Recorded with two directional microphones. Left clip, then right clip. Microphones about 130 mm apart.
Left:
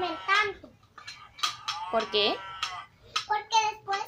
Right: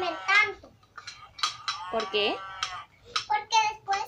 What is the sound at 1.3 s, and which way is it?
Cutlery, 15° right (ahead or behind).